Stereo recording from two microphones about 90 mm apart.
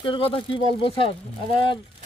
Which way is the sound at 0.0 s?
75° left (ahead or behind).